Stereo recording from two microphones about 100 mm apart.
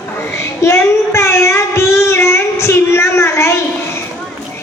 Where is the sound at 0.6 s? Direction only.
30° left (ahead or behind).